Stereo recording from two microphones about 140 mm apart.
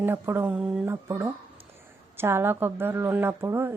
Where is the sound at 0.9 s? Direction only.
20° right (ahead or behind).